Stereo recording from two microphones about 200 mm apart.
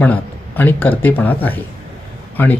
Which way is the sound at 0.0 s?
10° left (ahead or behind).